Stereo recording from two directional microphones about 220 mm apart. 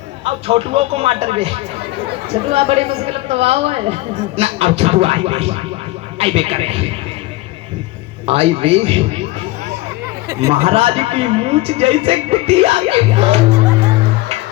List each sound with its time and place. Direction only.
0.3 s speech: 25° right (ahead or behind)
8.3 s speech: 25° right (ahead or behind)
10.5 s speech: 25° right (ahead or behind)